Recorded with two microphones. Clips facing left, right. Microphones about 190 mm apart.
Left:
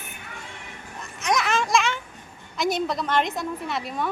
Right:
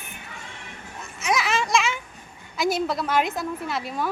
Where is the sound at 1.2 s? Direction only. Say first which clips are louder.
Left 1 dB; centre (ahead or behind).